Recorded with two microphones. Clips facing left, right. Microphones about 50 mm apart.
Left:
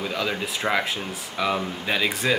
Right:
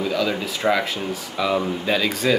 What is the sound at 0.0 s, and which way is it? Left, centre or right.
Speech, centre.